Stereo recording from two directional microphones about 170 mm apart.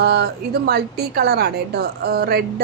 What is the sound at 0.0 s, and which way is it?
A woman's voice, 70° right (ahead or behind).